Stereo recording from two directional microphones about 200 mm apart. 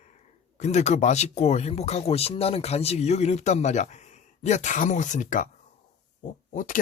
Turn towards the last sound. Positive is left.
turn(degrees=40)  # may be behind; listen again after turning